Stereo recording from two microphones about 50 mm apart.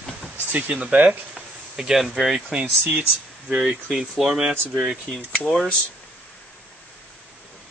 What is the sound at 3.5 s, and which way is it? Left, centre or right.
Speech, right.